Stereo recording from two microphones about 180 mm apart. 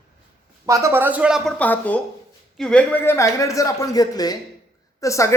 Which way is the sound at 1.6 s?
10° left (ahead or behind).